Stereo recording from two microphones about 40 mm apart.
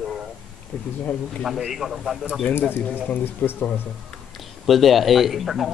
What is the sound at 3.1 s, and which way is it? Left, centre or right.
Speech, left.